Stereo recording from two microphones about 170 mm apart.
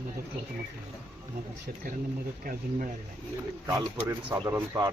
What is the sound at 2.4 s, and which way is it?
Speech, 55° right (ahead or behind).